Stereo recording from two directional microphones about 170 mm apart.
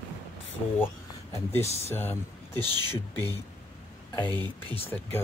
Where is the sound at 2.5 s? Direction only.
25° right (ahead or behind).